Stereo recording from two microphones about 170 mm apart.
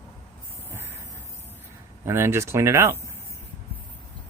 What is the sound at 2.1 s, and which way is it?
Speech, 15° right (ahead or behind).